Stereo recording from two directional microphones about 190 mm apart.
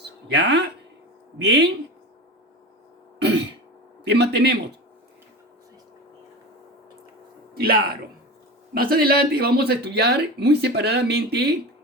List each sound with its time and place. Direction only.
0.0 s a sound: 65° right (ahead or behind)
1.4 s speech: 65° right (ahead or behind)
3.2 s throat clearing: 65° right (ahead or behind)
4.0 s speech: 60° right (ahead or behind)
7.5 s a man's voice: 50° right (ahead or behind)